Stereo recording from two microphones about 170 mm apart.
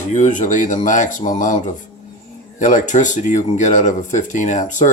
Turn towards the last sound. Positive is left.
turn(degrees=45)  # may be behind; listen again after turning